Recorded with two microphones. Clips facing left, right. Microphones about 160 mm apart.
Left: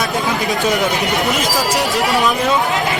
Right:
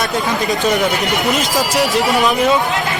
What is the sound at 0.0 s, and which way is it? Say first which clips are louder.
Speech: right 1 dB; centre (ahead or behind).